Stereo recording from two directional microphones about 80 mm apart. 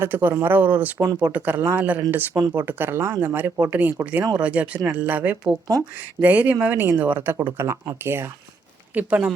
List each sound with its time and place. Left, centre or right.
0.0 s speech: right
9.0 s speech: centre